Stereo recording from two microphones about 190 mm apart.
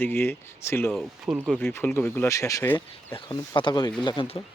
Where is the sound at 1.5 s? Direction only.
10° left (ahead or behind).